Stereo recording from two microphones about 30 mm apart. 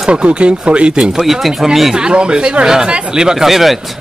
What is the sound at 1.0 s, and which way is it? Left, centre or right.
Speech, centre.